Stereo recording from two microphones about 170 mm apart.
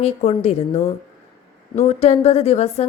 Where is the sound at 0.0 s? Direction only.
35° left (ahead or behind).